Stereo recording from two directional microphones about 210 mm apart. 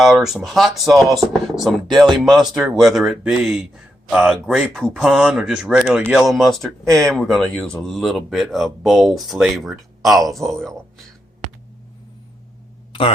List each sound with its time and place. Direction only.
0.3 s speech: centre (ahead or behind)